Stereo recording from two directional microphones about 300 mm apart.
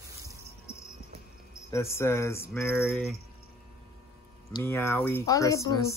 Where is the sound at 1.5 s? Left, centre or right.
Centre.